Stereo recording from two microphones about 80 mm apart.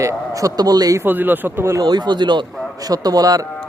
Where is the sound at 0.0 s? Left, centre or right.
Right.